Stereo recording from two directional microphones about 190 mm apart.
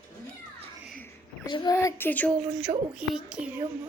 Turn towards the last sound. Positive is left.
turn(degrees=-10)  # may be behind; listen again after turning